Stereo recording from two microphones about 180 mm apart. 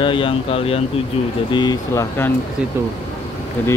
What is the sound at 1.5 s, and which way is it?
Speech, 20° left (ahead or behind).